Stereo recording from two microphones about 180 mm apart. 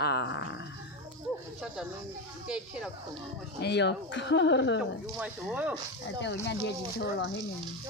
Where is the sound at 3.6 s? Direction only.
70° left (ahead or behind); by 4.8 s 90° left.